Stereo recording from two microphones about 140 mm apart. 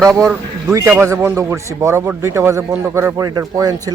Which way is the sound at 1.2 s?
15° right (ahead or behind).